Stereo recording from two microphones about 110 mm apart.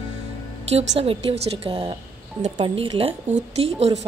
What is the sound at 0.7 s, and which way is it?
A woman's voice, 65° right (ahead or behind).